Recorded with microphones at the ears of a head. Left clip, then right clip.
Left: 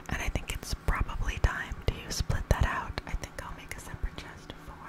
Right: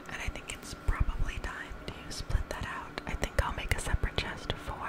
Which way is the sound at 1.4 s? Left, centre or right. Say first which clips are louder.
Left 9 dB; left.